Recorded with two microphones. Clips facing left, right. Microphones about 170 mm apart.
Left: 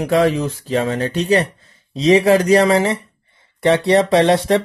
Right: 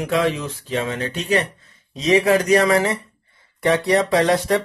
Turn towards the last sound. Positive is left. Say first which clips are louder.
# left 4 dB
turn(degrees=25)  # may be behind; listen again after turning